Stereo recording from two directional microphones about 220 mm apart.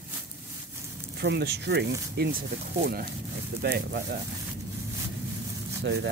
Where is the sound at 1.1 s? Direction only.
50° right (ahead or behind).